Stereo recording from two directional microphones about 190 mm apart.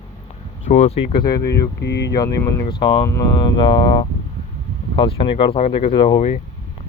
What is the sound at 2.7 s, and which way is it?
Speech, 20° left (ahead or behind).